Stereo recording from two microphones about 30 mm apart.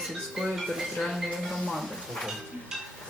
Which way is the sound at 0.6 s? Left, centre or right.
Centre.